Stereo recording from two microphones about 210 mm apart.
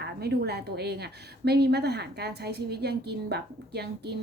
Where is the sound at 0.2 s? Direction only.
50° right (ahead or behind).